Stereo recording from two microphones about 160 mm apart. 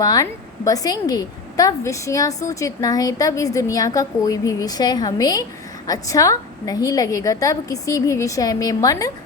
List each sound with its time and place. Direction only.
0.0 s a woman's voice: 20° left (ahead or behind)